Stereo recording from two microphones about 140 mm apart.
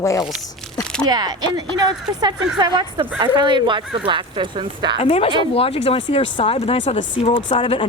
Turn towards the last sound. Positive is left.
turn(degrees=35)  # may be behind; listen again after turning